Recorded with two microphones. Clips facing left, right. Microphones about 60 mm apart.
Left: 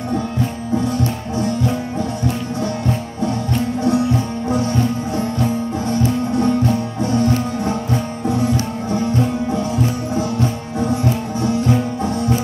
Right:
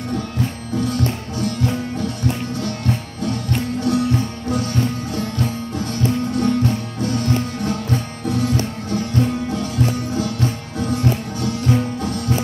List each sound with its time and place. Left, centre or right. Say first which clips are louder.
0.7 s music: left 1 dB; left